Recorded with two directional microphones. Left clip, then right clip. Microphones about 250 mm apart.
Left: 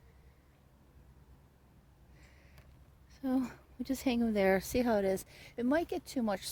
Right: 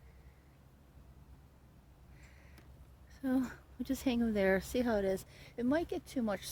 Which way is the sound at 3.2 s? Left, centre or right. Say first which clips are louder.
Left 1 dB; centre.